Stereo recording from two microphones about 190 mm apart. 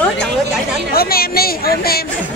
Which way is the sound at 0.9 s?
50° left (ahead or behind).